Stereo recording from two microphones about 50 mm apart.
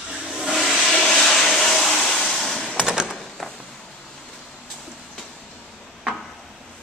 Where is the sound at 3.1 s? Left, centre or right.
Centre.